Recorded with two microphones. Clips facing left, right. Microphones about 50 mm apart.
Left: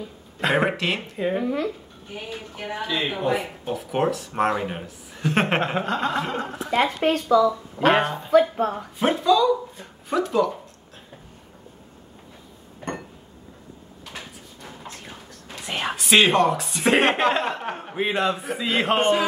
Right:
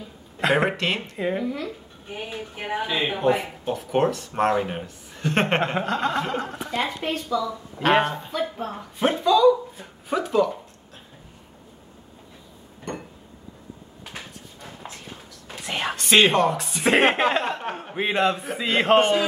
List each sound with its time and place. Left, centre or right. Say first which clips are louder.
0.4 s speech: even; centre
1.4 s speech: left 4 dB; left
2.2 s speech: right 1 dB; centre
3.2 s speech: right 2 dB; centre
7.1 s speech: left 7 dB; left
7.8 s speech: left 1 dB; centre
8.5 s speech: left 7 dB; left
9.0 s speech: right 2 dB; centre
12.9 s a sound: left 2 dB; left
15.6 s speech: even; centre
18.9 s a man's voice: right 1 dB; centre